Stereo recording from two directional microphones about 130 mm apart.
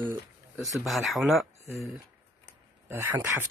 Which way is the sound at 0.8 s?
Centre (ahead or behind).